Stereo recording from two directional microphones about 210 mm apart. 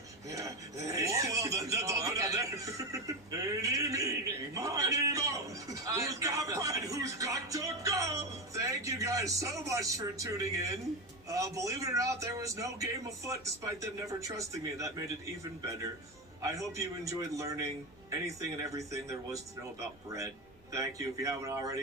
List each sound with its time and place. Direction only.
0.3 s a sound: 15° right (ahead or behind)
11.3 s a man's voice: 15° right (ahead or behind)
16.4 s a man's voice: 15° right (ahead or behind)